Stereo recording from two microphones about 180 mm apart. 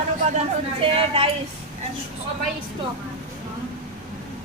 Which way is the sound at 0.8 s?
30° right (ahead or behind).